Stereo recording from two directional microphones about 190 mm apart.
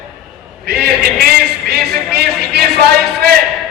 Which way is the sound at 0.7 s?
60° right (ahead or behind).